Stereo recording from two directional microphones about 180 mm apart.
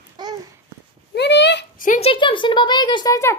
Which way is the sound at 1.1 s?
70° left (ahead or behind).